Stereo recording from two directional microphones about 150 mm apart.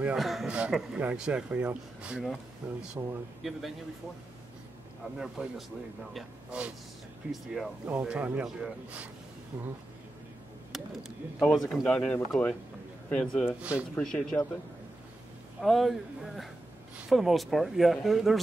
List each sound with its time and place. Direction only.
0.0 s speech: centre (ahead or behind)
5.0 s speech: 5° right (ahead or behind)
10.7 s speech: centre (ahead or behind)
13.6 s speech: 10° right (ahead or behind)
13.9 s speech: 5° left (ahead or behind)
15.6 s speech: centre (ahead or behind)